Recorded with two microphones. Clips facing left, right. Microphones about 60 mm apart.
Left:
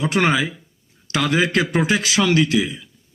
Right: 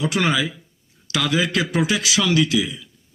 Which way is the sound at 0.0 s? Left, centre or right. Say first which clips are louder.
Left 2 dB; left.